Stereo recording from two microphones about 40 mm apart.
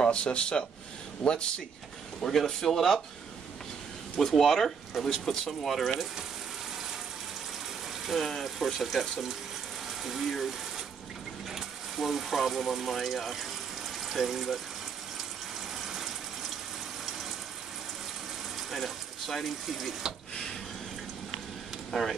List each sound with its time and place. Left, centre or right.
0.0 s speech: left
2.2 s speech: centre
4.2 s speech: centre
4.5 s speech: centre
8.3 s speech: centre
11.5 s speech: centre
15.8 s a sound: centre
18.7 s speech: centre
21.9 s speech: centre